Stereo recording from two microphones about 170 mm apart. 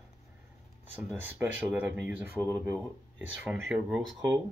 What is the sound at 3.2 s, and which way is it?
Speech, 10° right (ahead or behind).